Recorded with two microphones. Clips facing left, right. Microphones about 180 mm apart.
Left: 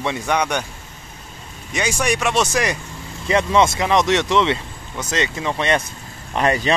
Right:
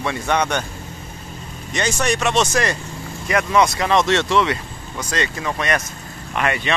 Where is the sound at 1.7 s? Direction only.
10° left (ahead or behind).